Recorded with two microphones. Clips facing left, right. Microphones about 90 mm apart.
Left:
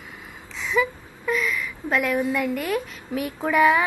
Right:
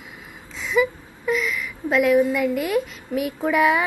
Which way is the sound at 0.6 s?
10° right (ahead or behind).